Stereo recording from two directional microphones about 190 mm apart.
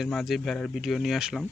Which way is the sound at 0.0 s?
Centre (ahead or behind).